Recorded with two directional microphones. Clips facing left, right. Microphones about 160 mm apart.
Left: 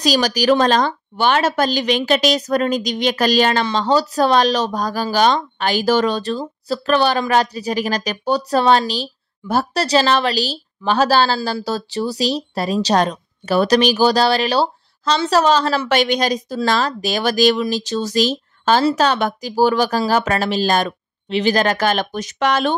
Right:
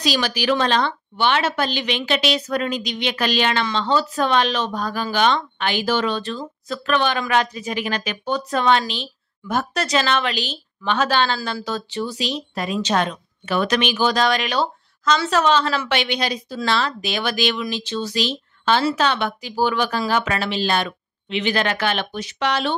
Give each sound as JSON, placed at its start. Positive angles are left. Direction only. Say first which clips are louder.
{"t": 0.0, "sound": "speech", "louder": "left 5 dB", "side_deg": 40}